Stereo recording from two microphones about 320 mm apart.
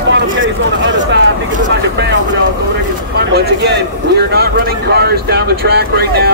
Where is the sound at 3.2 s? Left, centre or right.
Right.